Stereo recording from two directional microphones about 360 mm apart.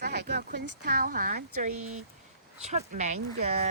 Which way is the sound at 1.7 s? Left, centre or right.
Right.